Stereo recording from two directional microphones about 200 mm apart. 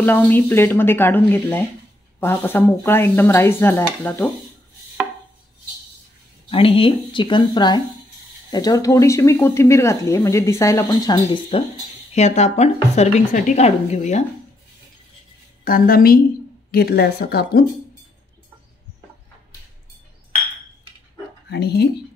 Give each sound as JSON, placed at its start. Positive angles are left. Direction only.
{"t": 0.0, "sound": "speech", "side_deg": 10}
{"t": 6.5, "sound": "speech", "side_deg": 25}
{"t": 12.1, "sound": "speech", "side_deg": 35}
{"t": 15.6, "sound": "speech", "side_deg": 45}
{"t": 21.5, "sound": "speech", "side_deg": 55}